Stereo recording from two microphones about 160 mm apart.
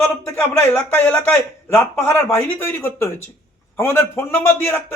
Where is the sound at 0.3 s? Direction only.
15° left (ahead or behind).